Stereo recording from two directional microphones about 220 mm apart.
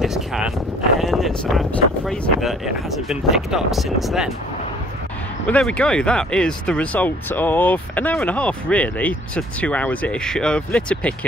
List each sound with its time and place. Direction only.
0.0 s a sound: centre (ahead or behind)
1.0 s speech: centre (ahead or behind)
5.5 s speech: 5° left (ahead or behind)